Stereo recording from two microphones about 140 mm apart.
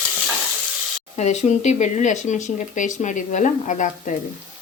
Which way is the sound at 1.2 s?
55° left (ahead or behind).